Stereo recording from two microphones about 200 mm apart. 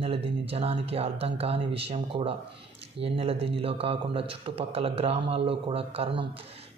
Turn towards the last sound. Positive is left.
turn(degrees=-30)  # may be behind; listen again after turning